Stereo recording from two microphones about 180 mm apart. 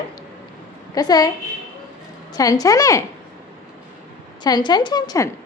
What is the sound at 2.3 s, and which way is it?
Speech, 20° left (ahead or behind).